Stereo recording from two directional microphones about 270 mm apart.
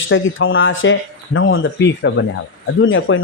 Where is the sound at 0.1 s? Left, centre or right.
Left.